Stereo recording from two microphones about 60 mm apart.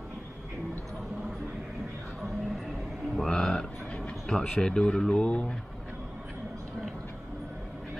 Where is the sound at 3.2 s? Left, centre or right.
Centre.